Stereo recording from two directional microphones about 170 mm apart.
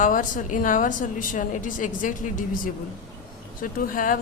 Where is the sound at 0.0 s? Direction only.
50° left (ahead or behind).